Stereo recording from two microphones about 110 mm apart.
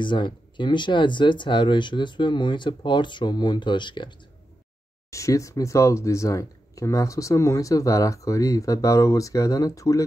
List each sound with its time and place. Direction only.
0.0 s speech: 45° left (ahead or behind)
5.1 s speech: 30° left (ahead or behind)